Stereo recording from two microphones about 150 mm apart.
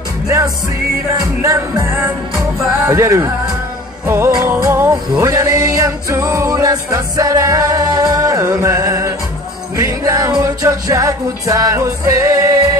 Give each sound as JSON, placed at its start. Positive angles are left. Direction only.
{"t": 1.4, "sound": "music", "side_deg": -20}